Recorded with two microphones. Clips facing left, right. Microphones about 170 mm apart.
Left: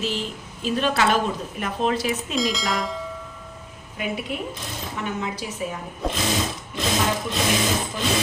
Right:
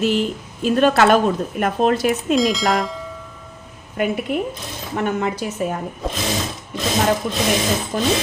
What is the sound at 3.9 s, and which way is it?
A woman's voice, 55° right (ahead or behind).